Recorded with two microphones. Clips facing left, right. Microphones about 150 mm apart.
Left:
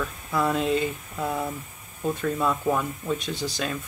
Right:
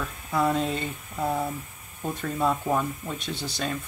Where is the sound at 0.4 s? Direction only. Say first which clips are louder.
Left 1 dB; centre (ahead or behind).